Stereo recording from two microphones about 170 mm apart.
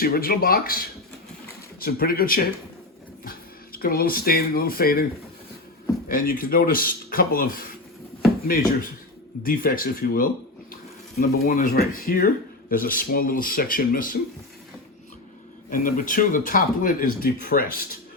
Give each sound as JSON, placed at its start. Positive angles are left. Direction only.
{"t": 0.0, "sound": "speech", "side_deg": 60}
{"t": 6.1, "sound": "speech", "side_deg": 55}
{"t": 9.4, "sound": "speech", "side_deg": 55}
{"t": 15.7, "sound": "speech", "side_deg": 50}